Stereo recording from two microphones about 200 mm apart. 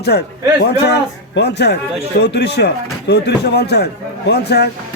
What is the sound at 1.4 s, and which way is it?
A man's voice, 55° left (ahead or behind).